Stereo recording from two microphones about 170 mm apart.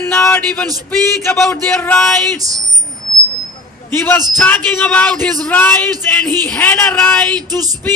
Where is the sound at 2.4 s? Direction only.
20° right (ahead or behind).